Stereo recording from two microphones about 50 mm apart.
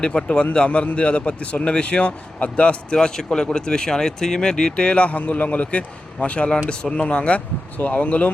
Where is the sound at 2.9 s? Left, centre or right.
Centre.